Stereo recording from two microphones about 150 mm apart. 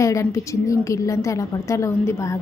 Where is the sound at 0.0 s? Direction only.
20° left (ahead or behind).